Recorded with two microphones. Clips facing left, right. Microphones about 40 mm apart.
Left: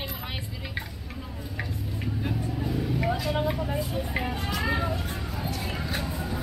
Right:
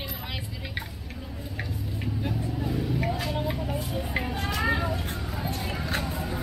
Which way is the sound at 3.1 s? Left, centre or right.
Left.